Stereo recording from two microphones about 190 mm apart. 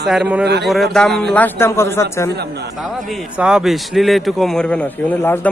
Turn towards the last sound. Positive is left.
turn(degrees=10)  # may be behind; listen again after turning